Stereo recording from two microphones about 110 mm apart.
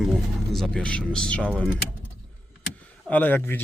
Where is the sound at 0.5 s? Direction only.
5° left (ahead or behind).